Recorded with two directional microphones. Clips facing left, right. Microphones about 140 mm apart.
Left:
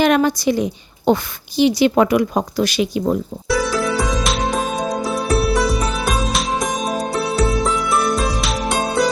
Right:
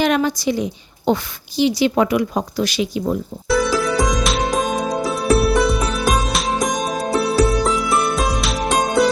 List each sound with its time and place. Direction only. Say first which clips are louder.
0.0 s a woman's voice: left 3 dB; 55° left (ahead or behind)
3.5 s music: right 1 dB; centre (ahead or behind)